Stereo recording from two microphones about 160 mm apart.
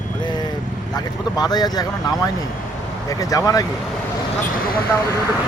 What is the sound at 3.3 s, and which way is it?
Speech, 25° left (ahead or behind).